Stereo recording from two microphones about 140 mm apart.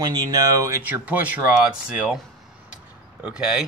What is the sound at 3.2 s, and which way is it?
Speech, 10° right (ahead or behind).